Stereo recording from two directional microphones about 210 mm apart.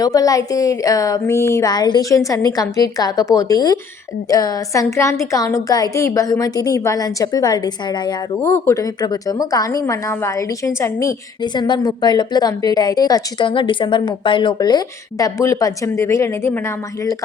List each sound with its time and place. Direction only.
0.0 s a woman's voice: 15° left (ahead or behind)